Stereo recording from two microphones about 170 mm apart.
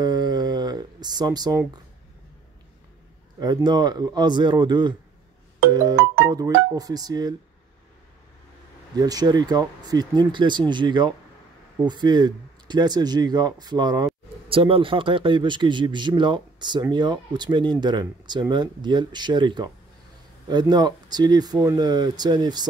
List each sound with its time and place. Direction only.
0.0 s a sound: 25° right (ahead or behind)
3.3 s speech: 25° right (ahead or behind)
5.7 s music: 20° right (ahead or behind)
6.2 s speech: 20° right (ahead or behind)
8.9 s speech: 20° right (ahead or behind)